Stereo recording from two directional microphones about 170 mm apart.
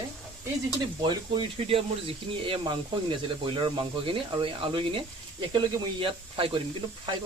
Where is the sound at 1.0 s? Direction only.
30° right (ahead or behind).